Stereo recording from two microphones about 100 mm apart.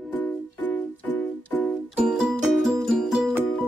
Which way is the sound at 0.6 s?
15° left (ahead or behind).